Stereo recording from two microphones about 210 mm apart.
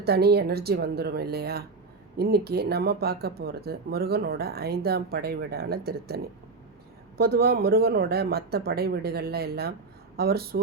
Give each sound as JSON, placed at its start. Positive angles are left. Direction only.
{"t": 0.0, "sound": "speech", "side_deg": -50}
{"t": 7.2, "sound": "speech", "side_deg": -50}